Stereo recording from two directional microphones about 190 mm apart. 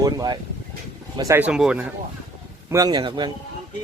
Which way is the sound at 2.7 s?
20° right (ahead or behind).